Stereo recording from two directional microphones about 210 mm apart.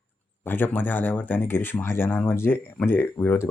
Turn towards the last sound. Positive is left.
turn(degrees=10)  # may be behind; listen again after turning